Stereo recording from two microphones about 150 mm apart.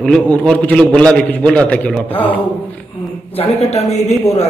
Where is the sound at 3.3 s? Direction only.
40° left (ahead or behind).